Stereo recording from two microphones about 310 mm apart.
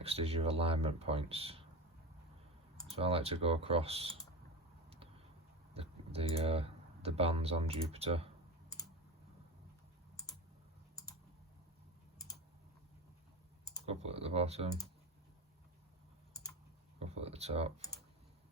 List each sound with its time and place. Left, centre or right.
0.0 s speech: centre
2.9 s speech: centre
5.7 s speech: centre
13.8 s speech: centre
17.0 s speech: centre